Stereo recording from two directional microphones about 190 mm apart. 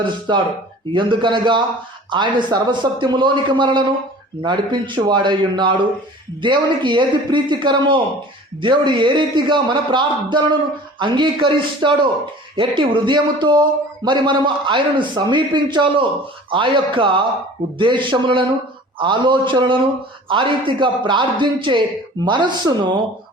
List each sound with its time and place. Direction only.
0.3 s a man's voice: 25° right (ahead or behind)